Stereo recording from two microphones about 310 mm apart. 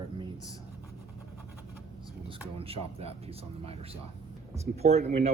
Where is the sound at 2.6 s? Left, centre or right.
Centre.